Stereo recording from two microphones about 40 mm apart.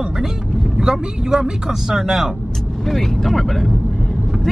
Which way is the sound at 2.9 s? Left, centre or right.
Centre.